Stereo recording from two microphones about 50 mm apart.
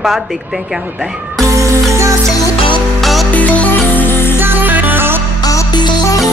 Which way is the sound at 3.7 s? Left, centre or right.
Left.